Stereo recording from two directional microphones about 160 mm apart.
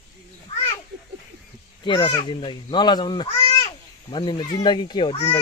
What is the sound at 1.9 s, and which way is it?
Speech, 30° left (ahead or behind).